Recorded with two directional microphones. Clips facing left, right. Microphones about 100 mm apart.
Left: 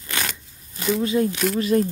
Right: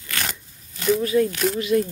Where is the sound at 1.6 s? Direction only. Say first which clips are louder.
Left 2 dB; 40° left (ahead or behind).